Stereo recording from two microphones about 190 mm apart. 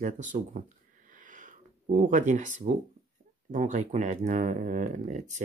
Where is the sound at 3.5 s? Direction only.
40° right (ahead or behind).